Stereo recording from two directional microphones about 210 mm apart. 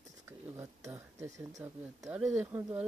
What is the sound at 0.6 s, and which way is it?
Speech, 15° right (ahead or behind).